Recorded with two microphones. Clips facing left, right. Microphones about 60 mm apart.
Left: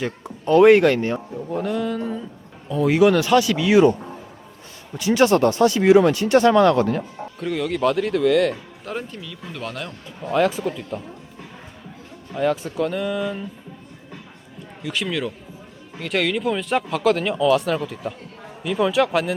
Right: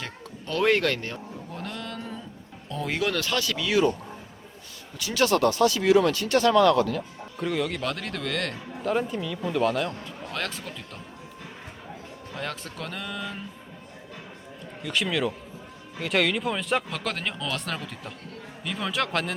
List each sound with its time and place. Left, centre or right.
0.4 s speech: left
1.5 s speech: centre
4.9 s speech: left
7.3 s speech: centre
10.3 s speech: centre
12.3 s speech: centre
14.8 s speech: centre